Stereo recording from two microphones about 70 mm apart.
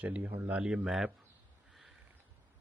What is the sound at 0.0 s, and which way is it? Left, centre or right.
Speech, right.